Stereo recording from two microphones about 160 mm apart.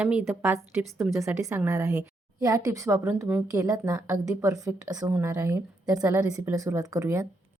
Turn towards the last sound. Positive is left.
turn(degrees=-20)  # may be behind; listen again after turning